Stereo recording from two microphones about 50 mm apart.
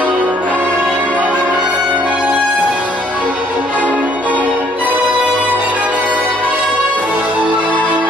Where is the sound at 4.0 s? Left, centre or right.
Right.